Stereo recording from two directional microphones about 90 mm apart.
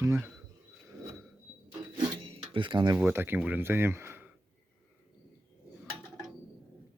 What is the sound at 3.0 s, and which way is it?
Speech, 25° right (ahead or behind).